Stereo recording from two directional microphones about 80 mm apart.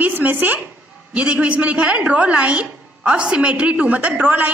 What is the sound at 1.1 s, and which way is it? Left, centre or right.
A woman's voice, centre.